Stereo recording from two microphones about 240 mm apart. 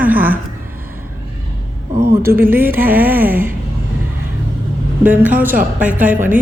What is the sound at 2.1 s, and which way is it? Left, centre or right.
Speech, centre.